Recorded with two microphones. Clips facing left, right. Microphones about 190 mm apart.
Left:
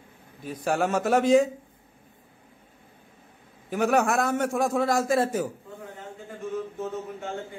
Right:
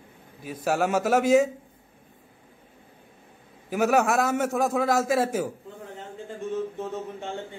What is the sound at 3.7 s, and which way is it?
A man's voice, 5° right (ahead or behind).